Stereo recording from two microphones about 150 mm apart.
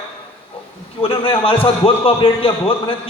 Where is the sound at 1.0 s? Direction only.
35° left (ahead or behind).